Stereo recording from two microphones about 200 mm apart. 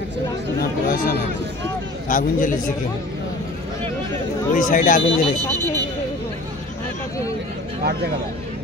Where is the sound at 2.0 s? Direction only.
40° left (ahead or behind).